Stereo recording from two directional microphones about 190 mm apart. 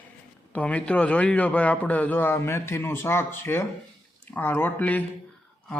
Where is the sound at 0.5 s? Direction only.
5° left (ahead or behind).